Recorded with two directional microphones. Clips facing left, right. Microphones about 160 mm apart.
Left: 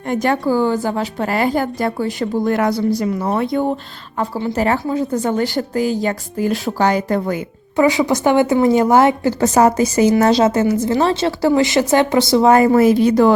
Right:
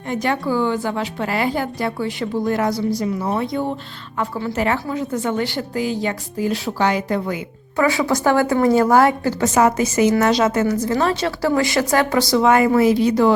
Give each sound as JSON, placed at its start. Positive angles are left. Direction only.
{"t": 0.1, "sound": "a woman's voice", "side_deg": 45}
{"t": 2.5, "sound": "a woman's voice", "side_deg": 60}
{"t": 4.2, "sound": "a woman's voice", "side_deg": 25}
{"t": 4.5, "sound": "a woman's voice", "side_deg": 35}
{"t": 7.8, "sound": "a woman's voice", "side_deg": 20}
{"t": 9.4, "sound": "a woman's voice", "side_deg": 35}